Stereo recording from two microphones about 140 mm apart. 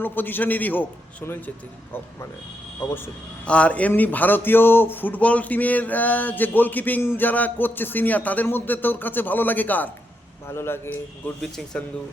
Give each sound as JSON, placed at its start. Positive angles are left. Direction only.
{"t": 0.0, "sound": "a man's voice", "side_deg": 15}
{"t": 3.4, "sound": "a man's voice", "side_deg": 10}